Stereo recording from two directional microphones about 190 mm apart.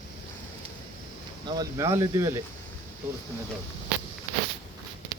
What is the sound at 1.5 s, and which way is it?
Speech, 20° right (ahead or behind).